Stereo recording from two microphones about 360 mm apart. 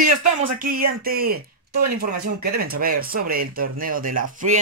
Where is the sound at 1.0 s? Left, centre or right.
Right.